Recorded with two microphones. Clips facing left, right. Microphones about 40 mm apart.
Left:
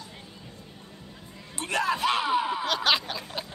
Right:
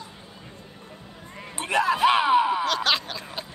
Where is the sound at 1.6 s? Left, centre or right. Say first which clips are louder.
Right 5 dB; centre.